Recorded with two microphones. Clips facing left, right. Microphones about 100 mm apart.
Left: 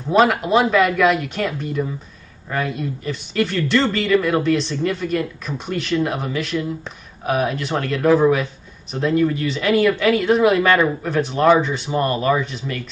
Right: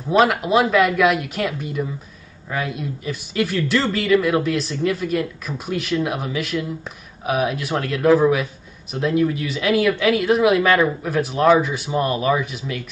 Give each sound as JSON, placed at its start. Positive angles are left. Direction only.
{"t": 0.1, "sound": "speech", "side_deg": 0}